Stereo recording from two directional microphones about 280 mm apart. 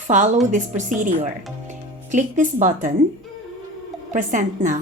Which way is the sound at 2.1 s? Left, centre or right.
Right.